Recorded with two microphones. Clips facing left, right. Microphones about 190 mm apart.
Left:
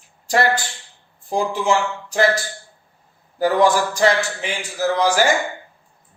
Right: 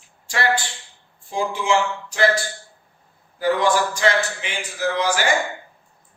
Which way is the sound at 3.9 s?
40° left (ahead or behind).